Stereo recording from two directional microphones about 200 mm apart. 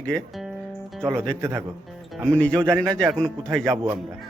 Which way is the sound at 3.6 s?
20° right (ahead or behind).